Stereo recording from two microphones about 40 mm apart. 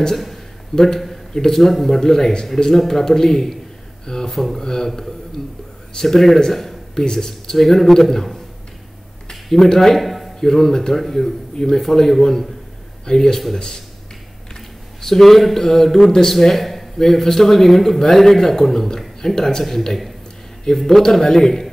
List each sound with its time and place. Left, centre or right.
0.1 s a man's voice: centre
4.0 s speech: centre
4.3 s a man's voice: centre
7.6 s a man's voice: centre
10.4 s a man's voice: centre
15.0 s a man's voice: centre